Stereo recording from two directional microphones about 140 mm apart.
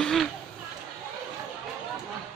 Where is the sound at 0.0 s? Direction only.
Centre (ahead or behind).